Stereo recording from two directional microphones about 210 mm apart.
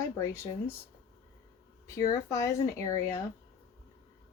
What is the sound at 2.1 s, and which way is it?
Speech, 15° left (ahead or behind).